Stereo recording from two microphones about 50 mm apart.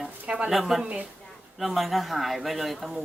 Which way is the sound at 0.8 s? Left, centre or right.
Right.